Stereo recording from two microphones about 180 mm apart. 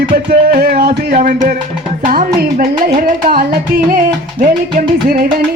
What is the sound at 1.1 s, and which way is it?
Music, 45° right (ahead or behind).